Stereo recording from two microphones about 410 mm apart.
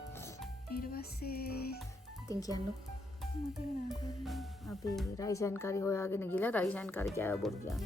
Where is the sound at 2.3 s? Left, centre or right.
Centre.